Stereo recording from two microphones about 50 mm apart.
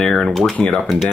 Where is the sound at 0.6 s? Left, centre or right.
Left.